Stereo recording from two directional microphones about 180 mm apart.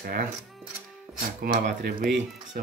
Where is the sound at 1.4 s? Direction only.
50° right (ahead or behind).